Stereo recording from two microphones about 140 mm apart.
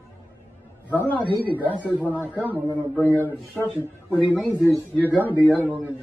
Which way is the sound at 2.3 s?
10° right (ahead or behind).